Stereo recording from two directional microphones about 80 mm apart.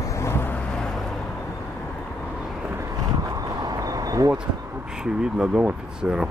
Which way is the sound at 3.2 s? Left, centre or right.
Right.